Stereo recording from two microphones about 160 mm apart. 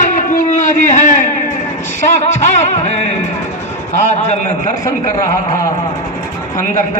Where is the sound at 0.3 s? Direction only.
50° left (ahead or behind).